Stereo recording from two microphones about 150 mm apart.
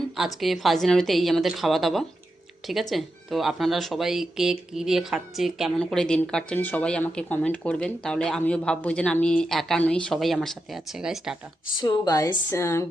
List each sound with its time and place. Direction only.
0.3 s speech: centre (ahead or behind)
11.8 s a woman's voice: 25° left (ahead or behind)